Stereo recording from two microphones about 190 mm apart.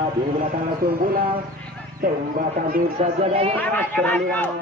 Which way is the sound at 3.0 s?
30° right (ahead or behind).